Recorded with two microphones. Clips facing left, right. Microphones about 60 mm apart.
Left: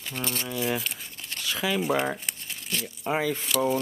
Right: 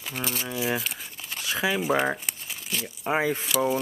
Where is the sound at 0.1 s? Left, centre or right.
Centre.